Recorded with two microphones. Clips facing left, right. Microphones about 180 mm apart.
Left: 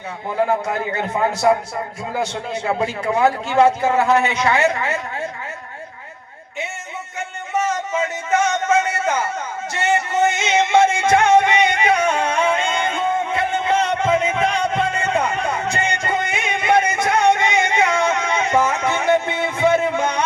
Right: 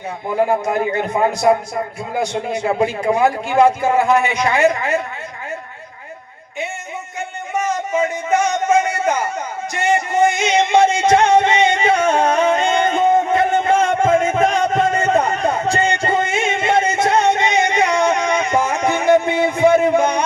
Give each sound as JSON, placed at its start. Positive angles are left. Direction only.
{"t": 0.6, "sound": "a man's voice", "side_deg": -15}
{"t": 7.5, "sound": "a sound", "side_deg": -10}
{"t": 9.7, "sound": "music", "side_deg": -15}
{"t": 12.0, "sound": "music", "side_deg": -40}